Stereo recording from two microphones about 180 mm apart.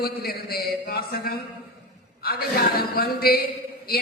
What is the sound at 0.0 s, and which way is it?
A man's voice, 60° left (ahead or behind).